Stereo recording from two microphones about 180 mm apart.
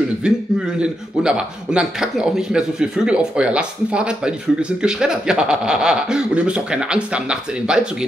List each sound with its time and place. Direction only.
0.2 s a man's voice: 5° right (ahead or behind)